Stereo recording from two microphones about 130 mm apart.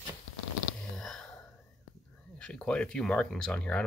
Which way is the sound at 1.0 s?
5° left (ahead or behind).